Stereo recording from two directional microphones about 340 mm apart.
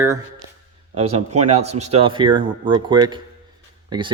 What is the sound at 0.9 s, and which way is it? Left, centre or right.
Speech, centre.